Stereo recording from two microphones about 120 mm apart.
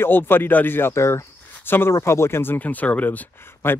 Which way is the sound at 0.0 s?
15° left (ahead or behind).